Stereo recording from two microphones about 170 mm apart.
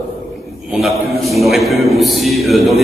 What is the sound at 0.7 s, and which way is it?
A man's voice, centre (ahead or behind).